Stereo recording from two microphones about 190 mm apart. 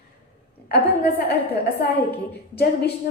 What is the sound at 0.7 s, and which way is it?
Speech, 55° left (ahead or behind).